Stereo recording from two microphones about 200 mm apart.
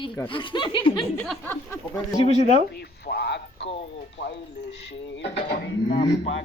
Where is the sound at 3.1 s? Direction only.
55° left (ahead or behind).